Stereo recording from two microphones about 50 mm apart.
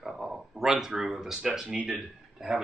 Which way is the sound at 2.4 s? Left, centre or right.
Centre.